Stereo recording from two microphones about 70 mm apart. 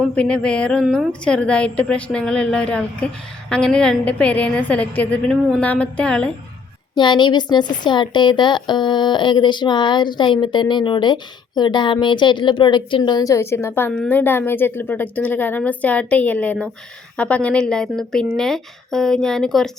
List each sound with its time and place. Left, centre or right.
0.2 s a woman's voice: centre
6.9 s speech: left
13.3 s a woman's voice: left; by 19.7 s centre